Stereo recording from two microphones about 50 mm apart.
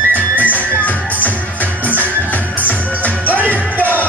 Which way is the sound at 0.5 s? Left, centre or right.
Left.